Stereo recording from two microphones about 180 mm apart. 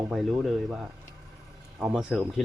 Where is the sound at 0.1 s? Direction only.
Centre (ahead or behind).